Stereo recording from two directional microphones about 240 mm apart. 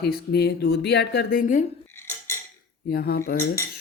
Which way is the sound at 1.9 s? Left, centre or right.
Centre.